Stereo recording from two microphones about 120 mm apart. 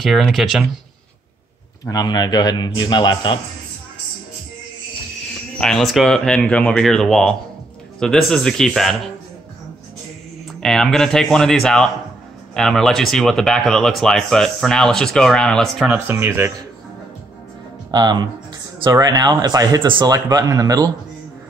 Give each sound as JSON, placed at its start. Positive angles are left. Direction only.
{"t": 0.0, "sound": "speech", "side_deg": 0}
{"t": 1.9, "sound": "a man's voice", "side_deg": 35}
{"t": 5.6, "sound": "speech", "side_deg": 5}
{"t": 10.6, "sound": "speech", "side_deg": 5}
{"t": 15.9, "sound": "speech", "side_deg": -15}
{"t": 17.9, "sound": "speech", "side_deg": -35}